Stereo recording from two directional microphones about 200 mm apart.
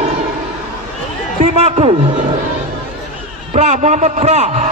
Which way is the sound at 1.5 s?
30° right (ahead or behind).